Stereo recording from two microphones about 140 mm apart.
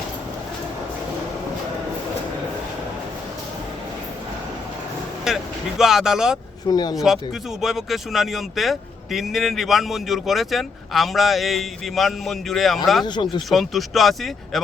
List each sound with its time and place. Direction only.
5.2 s speech: 5° right (ahead or behind)
6.7 s speech: 30° left (ahead or behind)
6.9 s a man's voice: centre (ahead or behind)
13.1 s speech: 35° left (ahead or behind)
13.5 s a man's voice: centre (ahead or behind)